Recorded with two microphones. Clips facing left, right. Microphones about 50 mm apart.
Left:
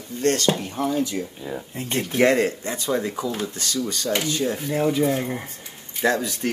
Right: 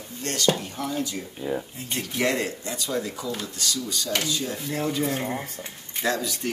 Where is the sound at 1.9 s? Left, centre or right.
Left.